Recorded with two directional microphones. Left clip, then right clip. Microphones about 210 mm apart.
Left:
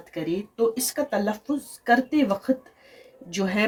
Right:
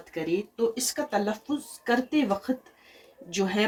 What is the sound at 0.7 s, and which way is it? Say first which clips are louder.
Speech: left 3 dB; 55° left (ahead or behind).